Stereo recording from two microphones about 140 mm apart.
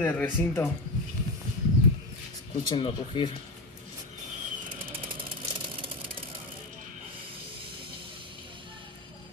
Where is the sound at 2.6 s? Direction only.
35° left (ahead or behind).